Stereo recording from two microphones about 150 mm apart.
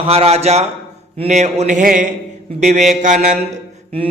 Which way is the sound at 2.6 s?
50° right (ahead or behind).